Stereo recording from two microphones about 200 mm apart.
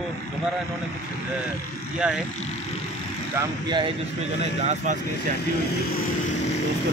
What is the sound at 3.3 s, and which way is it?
Speech, 20° right (ahead or behind).